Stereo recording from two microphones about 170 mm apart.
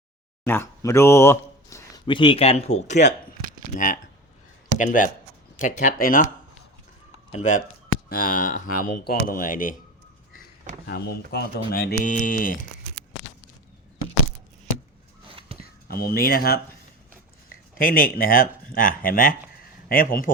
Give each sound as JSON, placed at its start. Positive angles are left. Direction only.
{"t": 0.4, "sound": "speech", "side_deg": 15}
{"t": 2.0, "sound": "speech", "side_deg": 30}
{"t": 7.3, "sound": "speech", "side_deg": 45}
{"t": 8.1, "sound": "speech", "side_deg": 60}
{"t": 10.8, "sound": "speech", "side_deg": 65}
{"t": 15.3, "sound": "a sound", "side_deg": -35}
{"t": 15.9, "sound": "speech", "side_deg": 65}
{"t": 17.7, "sound": "speech", "side_deg": 55}